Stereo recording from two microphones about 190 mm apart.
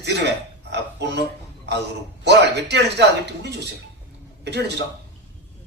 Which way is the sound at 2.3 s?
60° right (ahead or behind).